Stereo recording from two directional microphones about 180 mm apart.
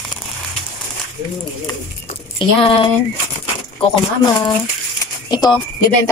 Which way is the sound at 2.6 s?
30° left (ahead or behind).